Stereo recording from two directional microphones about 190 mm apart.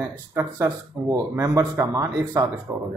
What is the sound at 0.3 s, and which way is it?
Speech, 15° right (ahead or behind).